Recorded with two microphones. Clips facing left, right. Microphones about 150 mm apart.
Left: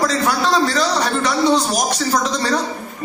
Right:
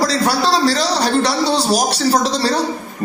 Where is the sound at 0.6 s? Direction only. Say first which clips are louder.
Right 2 dB; 35° right (ahead or behind).